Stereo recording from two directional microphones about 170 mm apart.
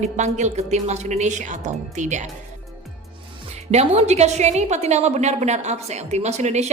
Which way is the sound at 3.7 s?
40° right (ahead or behind).